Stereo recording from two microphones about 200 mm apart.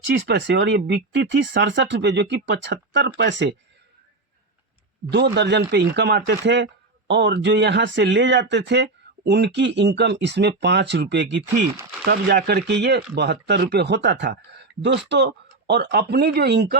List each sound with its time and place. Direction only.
0.1 s speech: 55° right (ahead or behind)
5.1 s speech: 55° right (ahead or behind)
12.0 s speech: 50° right (ahead or behind)